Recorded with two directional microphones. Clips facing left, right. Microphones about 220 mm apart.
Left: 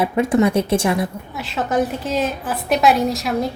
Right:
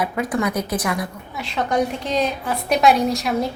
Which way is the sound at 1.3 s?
Centre (ahead or behind).